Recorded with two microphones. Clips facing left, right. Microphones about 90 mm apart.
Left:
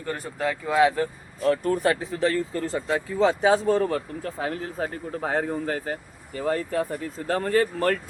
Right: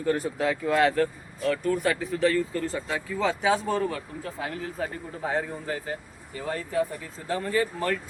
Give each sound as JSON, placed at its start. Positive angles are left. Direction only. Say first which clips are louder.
{"t": 0.0, "sound": "speech", "louder": "right 3 dB", "side_deg": 0}
{"t": 1.4, "sound": "speech", "louder": "left 3 dB", "side_deg": 35}
{"t": 2.0, "sound": "speech", "louder": "even", "side_deg": 25}